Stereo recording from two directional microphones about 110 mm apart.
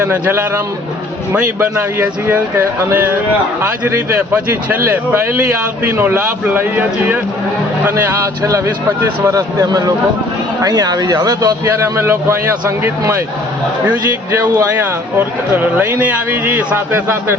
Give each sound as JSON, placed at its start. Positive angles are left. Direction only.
{"t": 0.0, "sound": "speech", "side_deg": -20}
{"t": 2.0, "sound": "a man's voice", "side_deg": -20}
{"t": 8.4, "sound": "speech", "side_deg": -30}
{"t": 11.6, "sound": "speech", "side_deg": -25}
{"t": 13.8, "sound": "a man's voice", "side_deg": -15}